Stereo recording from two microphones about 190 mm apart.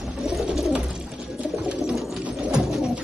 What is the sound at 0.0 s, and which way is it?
Bird, centre (ahead or behind).